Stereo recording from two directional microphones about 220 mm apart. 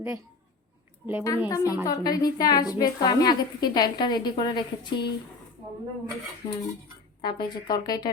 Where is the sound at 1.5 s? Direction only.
15° left (ahead or behind).